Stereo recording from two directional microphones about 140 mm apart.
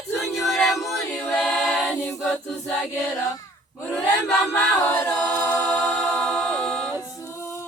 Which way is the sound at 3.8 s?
5° left (ahead or behind).